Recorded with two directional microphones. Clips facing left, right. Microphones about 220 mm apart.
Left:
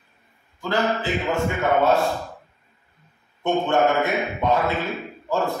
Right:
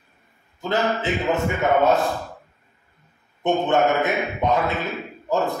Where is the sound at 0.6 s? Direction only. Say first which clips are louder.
Even; 20° right (ahead or behind).